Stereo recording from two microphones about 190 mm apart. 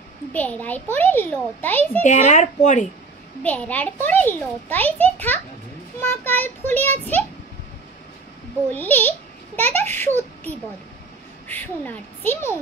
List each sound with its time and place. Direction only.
0.3 s a child's voice: 10° left (ahead or behind)
2.0 s a woman's voice: 40° left (ahead or behind)
3.4 s a child's voice: 10° left (ahead or behind)
8.6 s a child's voice: 10° left (ahead or behind)